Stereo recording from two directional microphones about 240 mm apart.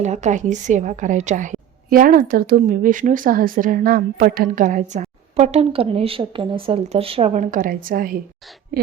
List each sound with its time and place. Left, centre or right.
0.0 s a woman's voice: right